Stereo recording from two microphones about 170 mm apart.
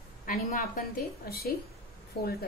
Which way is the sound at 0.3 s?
55° left (ahead or behind).